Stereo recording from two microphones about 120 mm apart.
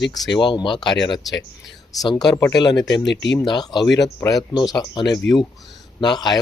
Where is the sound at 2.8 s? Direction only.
35° left (ahead or behind).